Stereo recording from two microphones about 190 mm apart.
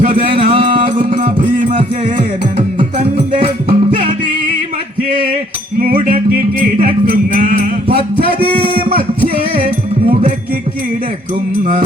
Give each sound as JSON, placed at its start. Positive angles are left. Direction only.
{"t": 0.1, "sound": "music", "side_deg": -25}
{"t": 0.9, "sound": "music", "side_deg": -45}
{"t": 1.7, "sound": "music", "side_deg": -25}
{"t": 6.8, "sound": "music", "side_deg": -45}
{"t": 8.3, "sound": "a sound", "side_deg": -25}
{"t": 8.8, "sound": "music", "side_deg": -50}
{"t": 10.1, "sound": "music", "side_deg": -35}